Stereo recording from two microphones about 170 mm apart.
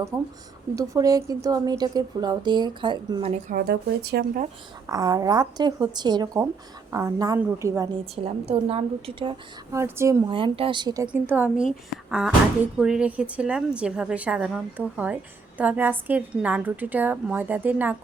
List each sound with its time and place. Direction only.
0.1 s a woman's voice: 20° right (ahead or behind)
3.5 s speech: 70° right (ahead or behind)
4.9 s a woman's voice: 20° right (ahead or behind)
8.1 s a woman's voice: 35° right (ahead or behind)
9.7 s a woman's voice: 15° right (ahead or behind)
10.2 s a woman's voice: 30° right (ahead or behind)
11.1 s a woman's voice: 10° right (ahead or behind)
12.8 s a woman's voice: 5° right (ahead or behind)